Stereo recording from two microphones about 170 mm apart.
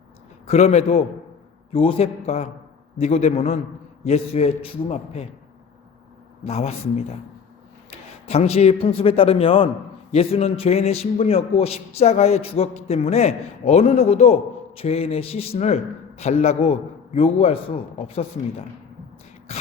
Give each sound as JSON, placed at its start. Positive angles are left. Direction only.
{"t": 0.4, "sound": "a man's voice", "side_deg": 40}
{"t": 6.4, "sound": "a man's voice", "side_deg": 35}